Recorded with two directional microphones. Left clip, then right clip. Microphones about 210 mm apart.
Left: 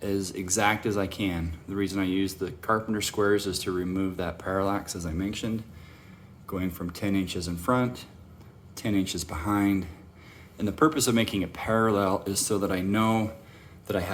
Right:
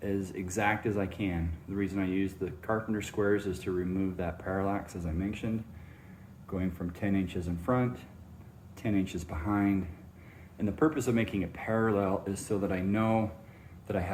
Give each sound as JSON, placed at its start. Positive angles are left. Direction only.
{"t": 0.0, "sound": "speech", "side_deg": 25}